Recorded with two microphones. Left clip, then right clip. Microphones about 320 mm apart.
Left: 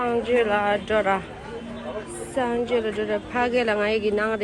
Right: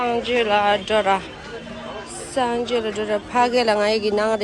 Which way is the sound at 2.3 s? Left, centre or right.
Centre.